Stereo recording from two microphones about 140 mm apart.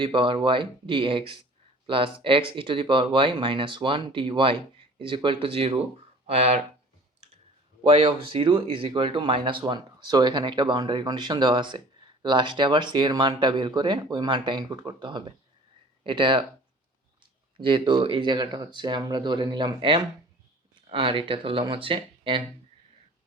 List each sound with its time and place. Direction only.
0.0 s speech: 35° right (ahead or behind)
7.9 s speech: 40° right (ahead or behind)
17.6 s speech: 35° right (ahead or behind)